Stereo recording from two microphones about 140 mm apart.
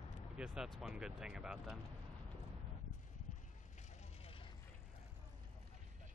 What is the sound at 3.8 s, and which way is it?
Vehicle, 55° left (ahead or behind).